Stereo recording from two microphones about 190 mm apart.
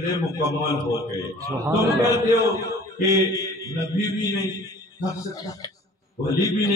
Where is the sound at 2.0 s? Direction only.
20° left (ahead or behind).